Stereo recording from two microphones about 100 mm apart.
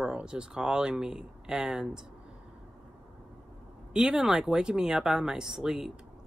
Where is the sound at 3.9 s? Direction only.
5° right (ahead or behind).